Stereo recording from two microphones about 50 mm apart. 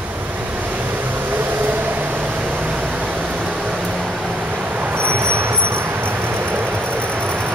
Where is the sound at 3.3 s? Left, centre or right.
Centre.